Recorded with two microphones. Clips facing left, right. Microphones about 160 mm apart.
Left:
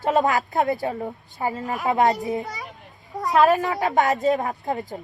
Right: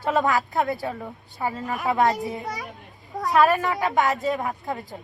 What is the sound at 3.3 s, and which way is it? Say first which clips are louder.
Speech: left 2 dB; 20° left (ahead or behind).